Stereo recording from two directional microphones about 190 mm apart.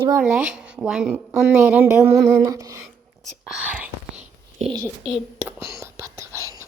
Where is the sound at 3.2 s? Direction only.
5° right (ahead or behind).